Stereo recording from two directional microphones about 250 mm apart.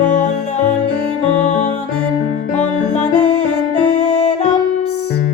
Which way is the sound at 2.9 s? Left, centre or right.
Left.